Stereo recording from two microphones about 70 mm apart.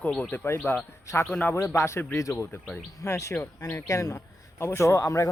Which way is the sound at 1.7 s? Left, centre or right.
Left.